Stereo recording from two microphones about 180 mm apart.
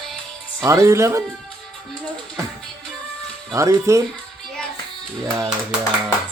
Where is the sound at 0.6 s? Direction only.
15° right (ahead or behind).